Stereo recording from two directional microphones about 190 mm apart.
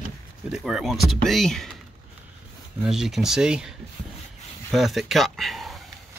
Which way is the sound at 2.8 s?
Centre (ahead or behind).